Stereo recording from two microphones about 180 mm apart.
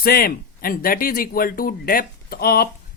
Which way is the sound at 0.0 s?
55° left (ahead or behind).